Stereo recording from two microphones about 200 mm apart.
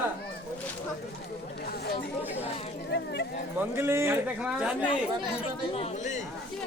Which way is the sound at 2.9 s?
55° left (ahead or behind).